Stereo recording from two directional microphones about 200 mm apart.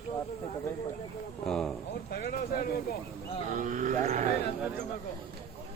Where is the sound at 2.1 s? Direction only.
50° left (ahead or behind).